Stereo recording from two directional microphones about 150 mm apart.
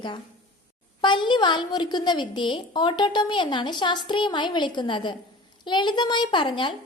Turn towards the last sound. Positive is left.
turn(degrees=35)  # may be behind; listen again after turning